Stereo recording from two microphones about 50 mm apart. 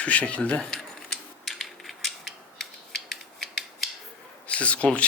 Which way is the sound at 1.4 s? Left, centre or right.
Centre.